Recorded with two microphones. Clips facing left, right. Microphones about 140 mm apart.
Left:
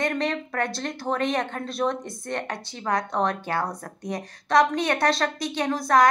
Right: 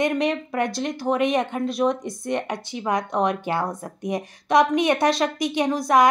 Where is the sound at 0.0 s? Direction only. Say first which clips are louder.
Right 4 dB; 15° right (ahead or behind).